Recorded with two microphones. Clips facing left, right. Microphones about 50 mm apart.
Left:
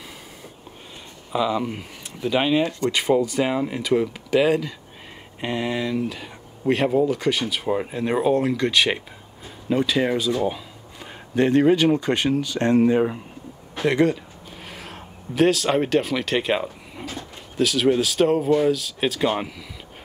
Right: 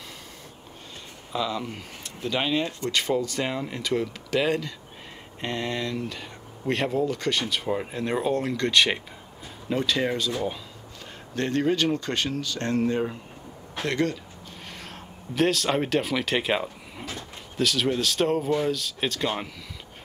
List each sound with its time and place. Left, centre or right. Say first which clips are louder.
1.3 s speech: left 6 dB; centre